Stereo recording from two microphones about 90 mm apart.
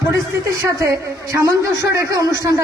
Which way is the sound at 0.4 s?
35° right (ahead or behind).